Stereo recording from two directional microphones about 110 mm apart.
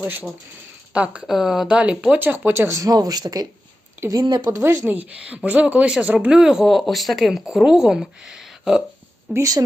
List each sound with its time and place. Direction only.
0.0 s speech: 15° right (ahead or behind); by 4.6 s 40° right (ahead or behind)
4.6 s speech: 25° right (ahead or behind); by 8.8 s 5° right (ahead or behind)
9.3 s speech: 30° right (ahead or behind)